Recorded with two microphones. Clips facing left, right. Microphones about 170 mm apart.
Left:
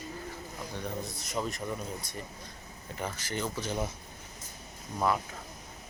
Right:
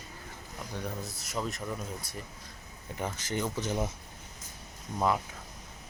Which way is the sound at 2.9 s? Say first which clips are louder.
Right 2 dB; 20° right (ahead or behind).